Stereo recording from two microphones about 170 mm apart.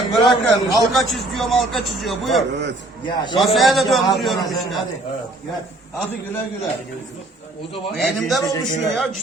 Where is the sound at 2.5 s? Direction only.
90° right.